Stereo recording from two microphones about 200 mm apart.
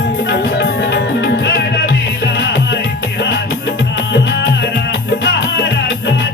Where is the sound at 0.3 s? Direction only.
55° left (ahead or behind).